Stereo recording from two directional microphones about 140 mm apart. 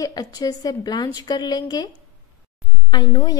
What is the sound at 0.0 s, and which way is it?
Speech, 25° left (ahead or behind).